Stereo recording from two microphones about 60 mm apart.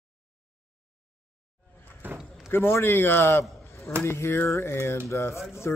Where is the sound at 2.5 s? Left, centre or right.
Left.